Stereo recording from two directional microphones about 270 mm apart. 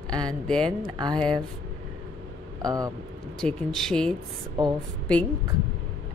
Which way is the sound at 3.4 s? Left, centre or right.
Centre.